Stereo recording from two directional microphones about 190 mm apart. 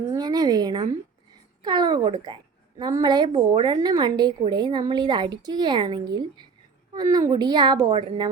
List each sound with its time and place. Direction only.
0.1 s a woman's voice: 20° right (ahead or behind)